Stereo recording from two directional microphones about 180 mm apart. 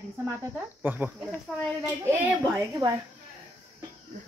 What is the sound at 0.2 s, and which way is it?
A child's voice, 10° right (ahead or behind).